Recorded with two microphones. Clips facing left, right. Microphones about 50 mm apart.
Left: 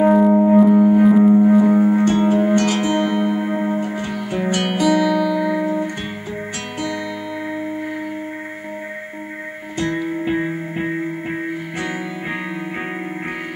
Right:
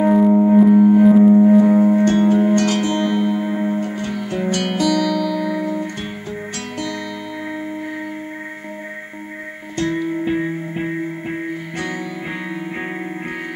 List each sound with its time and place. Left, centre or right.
0.1 s music: centre
9.8 s music: centre